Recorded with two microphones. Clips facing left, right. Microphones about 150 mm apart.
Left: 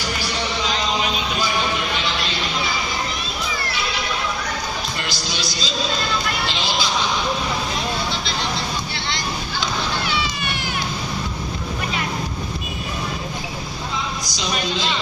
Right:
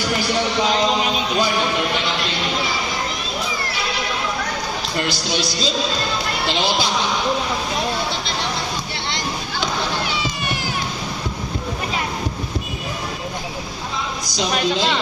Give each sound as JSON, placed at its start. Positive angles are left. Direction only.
{"t": 5.0, "sound": "speech", "side_deg": -60}
{"t": 14.3, "sound": "speech", "side_deg": -60}